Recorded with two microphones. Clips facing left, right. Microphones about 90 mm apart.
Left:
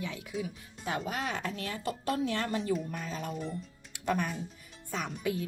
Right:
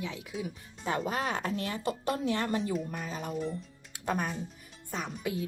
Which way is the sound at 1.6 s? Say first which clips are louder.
Right 3 dB; 25° right (ahead or behind).